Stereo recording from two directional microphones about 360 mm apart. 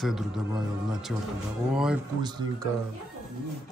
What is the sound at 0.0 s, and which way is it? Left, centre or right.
Speech, centre.